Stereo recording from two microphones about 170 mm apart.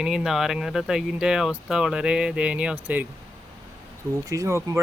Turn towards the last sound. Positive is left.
turn(degrees=-20)  # may be behind; listen again after turning